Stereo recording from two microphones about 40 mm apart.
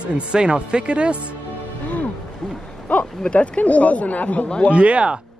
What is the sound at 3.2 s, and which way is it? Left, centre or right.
Speech, left.